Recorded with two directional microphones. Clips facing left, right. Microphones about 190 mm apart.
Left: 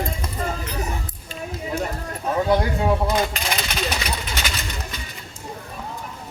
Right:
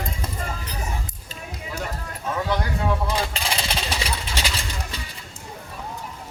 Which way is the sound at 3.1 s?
30° right (ahead or behind).